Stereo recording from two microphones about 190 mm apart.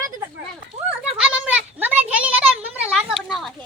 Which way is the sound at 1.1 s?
5° right (ahead or behind).